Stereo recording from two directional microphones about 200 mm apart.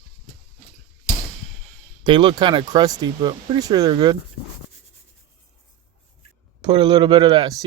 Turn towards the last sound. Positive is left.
turn(degrees=-20)  # may be behind; listen again after turning